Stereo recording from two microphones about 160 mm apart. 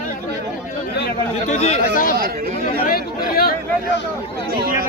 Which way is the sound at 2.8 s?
70° left (ahead or behind).